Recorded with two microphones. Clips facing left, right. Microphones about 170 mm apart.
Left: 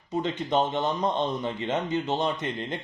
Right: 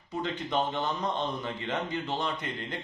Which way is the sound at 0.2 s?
20° left (ahead or behind).